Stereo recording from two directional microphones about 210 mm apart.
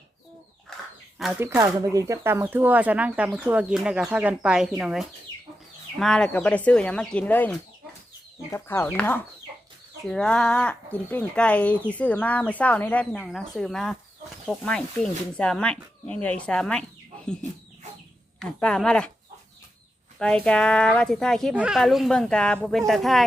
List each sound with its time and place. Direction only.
1.2 s speech: centre (ahead or behind)
1.5 s speech: 15° right (ahead or behind); by 16.8 s 5° left (ahead or behind)
18.3 s speech: centre (ahead or behind)
20.1 s speech: 5° left (ahead or behind)